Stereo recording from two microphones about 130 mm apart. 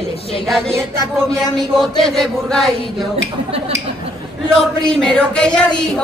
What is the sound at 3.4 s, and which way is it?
Speech, 50° right (ahead or behind).